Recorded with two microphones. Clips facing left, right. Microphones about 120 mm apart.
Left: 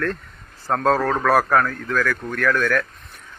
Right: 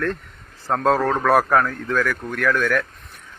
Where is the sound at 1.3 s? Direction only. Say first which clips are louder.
Right 1 dB; 20° right (ahead or behind).